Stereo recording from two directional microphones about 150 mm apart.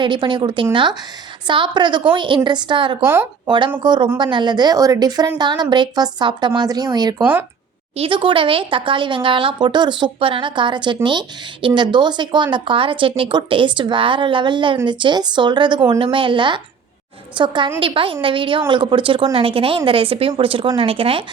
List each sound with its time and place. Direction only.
0.0 s speech: 30° right (ahead or behind)
3.0 s speech: 15° right (ahead or behind)
3.4 s a woman's voice: 30° right (ahead or behind)